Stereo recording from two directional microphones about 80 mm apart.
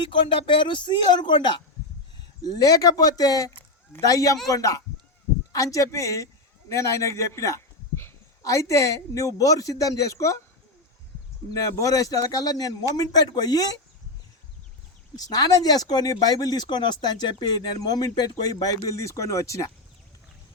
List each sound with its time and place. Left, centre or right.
0.1 s speech: left
2.4 s a man's voice: left
11.5 s a man's voice: left
15.1 s speech: left